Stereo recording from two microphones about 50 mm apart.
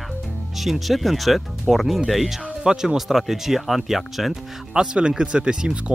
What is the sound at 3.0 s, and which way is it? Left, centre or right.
Speech, centre.